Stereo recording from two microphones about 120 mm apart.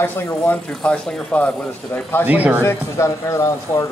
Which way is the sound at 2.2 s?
15° right (ahead or behind).